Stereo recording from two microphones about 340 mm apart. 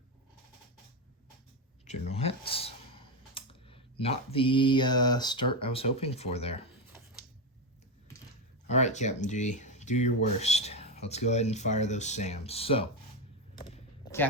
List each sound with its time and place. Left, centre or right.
1.8 s speech: centre
8.7 s speech: left
13.6 s a sound: centre